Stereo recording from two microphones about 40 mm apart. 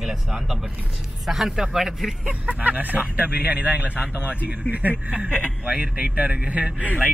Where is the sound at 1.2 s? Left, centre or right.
Centre.